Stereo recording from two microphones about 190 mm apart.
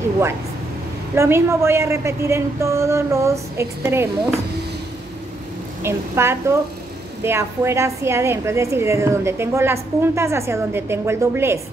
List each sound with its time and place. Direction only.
1.1 s a woman's voice: 15° right (ahead or behind)
5.8 s a woman's voice: 15° right (ahead or behind)